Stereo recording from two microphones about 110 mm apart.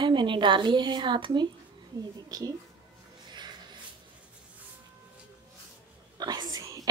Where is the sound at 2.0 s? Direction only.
35° right (ahead or behind).